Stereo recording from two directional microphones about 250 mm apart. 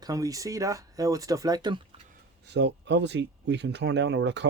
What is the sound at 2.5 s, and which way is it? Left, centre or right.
Speech, right.